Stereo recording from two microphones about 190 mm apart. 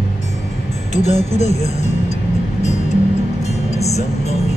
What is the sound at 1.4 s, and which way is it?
Music, 35° left (ahead or behind).